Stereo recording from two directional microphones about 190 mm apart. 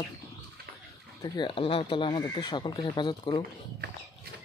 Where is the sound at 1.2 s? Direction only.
25° left (ahead or behind).